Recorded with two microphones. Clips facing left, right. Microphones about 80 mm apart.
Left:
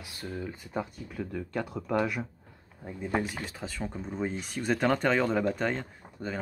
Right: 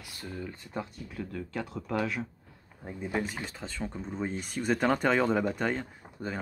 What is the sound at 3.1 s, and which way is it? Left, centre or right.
Speech, centre.